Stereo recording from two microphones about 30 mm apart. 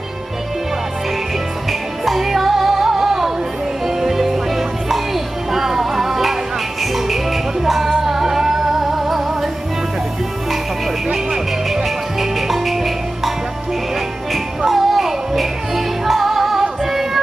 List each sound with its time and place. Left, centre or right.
1.7 s music: centre
7.6 s music: centre
11.7 s music: centre
14.7 s music: centre